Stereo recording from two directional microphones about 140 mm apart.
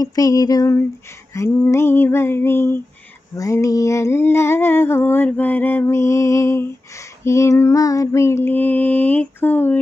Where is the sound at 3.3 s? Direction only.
20° left (ahead or behind).